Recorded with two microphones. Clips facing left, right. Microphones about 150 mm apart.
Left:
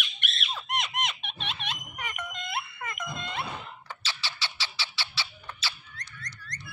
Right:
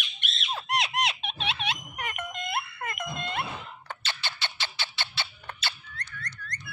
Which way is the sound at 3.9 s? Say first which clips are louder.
Right 3 dB; 55° right (ahead or behind).